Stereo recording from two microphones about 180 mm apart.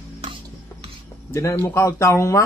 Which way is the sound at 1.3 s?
15° left (ahead or behind).